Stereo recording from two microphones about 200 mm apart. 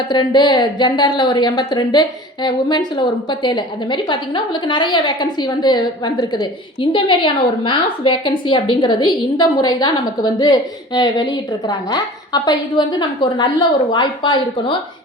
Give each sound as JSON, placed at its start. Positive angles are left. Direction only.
{"t": 0.1, "sound": "a woman's voice", "side_deg": 20}